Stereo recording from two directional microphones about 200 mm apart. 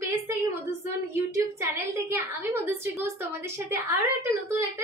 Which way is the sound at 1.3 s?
15° right (ahead or behind).